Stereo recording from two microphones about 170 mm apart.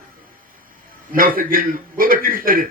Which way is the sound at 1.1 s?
55° right (ahead or behind).